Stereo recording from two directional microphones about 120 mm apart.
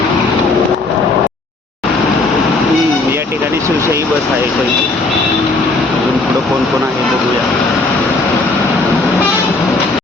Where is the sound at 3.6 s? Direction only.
25° right (ahead or behind).